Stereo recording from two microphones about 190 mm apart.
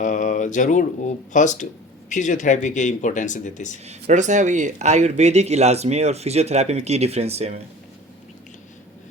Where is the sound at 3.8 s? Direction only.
40° right (ahead or behind).